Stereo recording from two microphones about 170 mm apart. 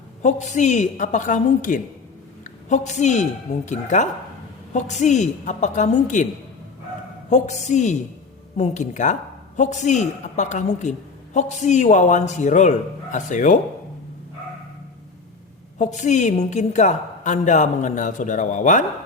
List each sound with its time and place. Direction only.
0.2 s a woman's voice: 45° left (ahead or behind)
7.3 s a woman's voice: 45° left (ahead or behind)
15.8 s a woman's voice: 45° left (ahead or behind)